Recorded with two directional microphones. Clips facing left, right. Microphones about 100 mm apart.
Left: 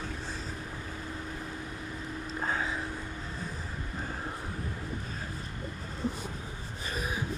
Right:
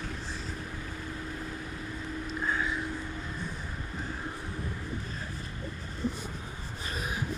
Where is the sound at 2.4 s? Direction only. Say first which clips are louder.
Right 1 dB; 50° left (ahead or behind).